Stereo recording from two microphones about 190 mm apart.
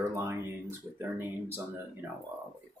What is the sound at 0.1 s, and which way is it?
Speech, 15° right (ahead or behind).